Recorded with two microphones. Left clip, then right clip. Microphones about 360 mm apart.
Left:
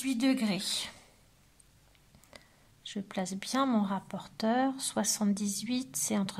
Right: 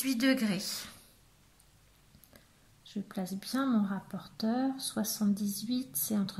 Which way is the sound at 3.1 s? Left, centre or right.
Centre.